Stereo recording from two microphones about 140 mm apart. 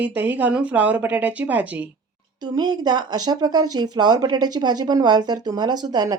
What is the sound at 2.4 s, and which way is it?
Speech, 30° right (ahead or behind).